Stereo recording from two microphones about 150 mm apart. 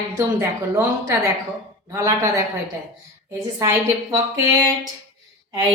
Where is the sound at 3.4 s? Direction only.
20° right (ahead or behind).